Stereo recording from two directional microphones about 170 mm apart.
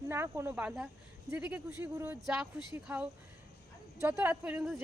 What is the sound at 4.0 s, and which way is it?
Speech, 15° right (ahead or behind).